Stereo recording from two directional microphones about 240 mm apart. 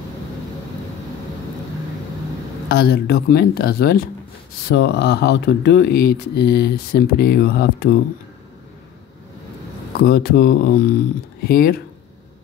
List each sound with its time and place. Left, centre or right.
2.7 s speech: left
9.9 s speech: left